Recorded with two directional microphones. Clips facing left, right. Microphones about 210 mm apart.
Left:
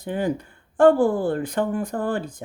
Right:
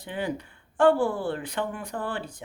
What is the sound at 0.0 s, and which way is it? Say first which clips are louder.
Speech: left 6 dB; 45° left (ahead or behind).